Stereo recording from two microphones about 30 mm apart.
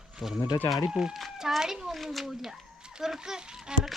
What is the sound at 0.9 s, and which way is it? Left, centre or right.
Speech, right.